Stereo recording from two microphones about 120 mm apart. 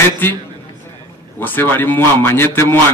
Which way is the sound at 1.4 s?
15° left (ahead or behind).